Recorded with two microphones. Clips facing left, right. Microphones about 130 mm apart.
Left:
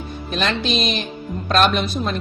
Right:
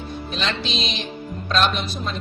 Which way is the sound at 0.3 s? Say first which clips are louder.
Left 6 dB; 55° left (ahead or behind).